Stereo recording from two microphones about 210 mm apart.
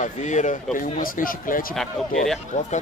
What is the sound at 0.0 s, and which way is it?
Speech, 35° left (ahead or behind).